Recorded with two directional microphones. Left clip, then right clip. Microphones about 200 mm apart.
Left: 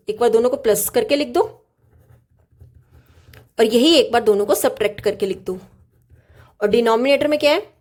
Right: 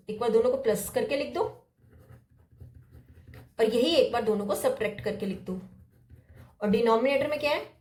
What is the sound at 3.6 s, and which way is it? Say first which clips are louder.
Speech: left 9 dB; 55° left (ahead or behind).